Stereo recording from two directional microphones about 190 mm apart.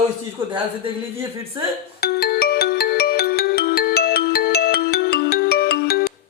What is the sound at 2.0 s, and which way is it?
Music, 55° left (ahead or behind).